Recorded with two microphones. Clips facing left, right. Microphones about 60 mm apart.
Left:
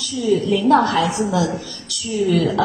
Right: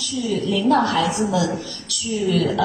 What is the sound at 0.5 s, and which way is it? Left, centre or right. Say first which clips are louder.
Speech: left 1 dB; left.